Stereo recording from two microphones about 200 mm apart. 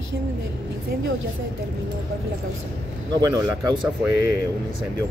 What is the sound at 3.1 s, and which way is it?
Speech, 20° right (ahead or behind).